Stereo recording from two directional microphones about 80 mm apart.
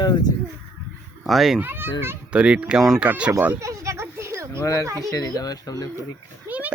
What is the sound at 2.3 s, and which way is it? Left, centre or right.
Speech, centre.